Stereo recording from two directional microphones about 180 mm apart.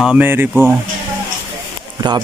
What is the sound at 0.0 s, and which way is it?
Speech, 10° right (ahead or behind).